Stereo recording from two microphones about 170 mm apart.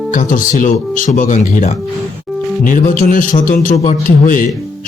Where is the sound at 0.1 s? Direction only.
50° left (ahead or behind).